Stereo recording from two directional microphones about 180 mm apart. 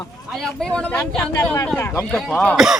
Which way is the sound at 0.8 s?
5° left (ahead or behind).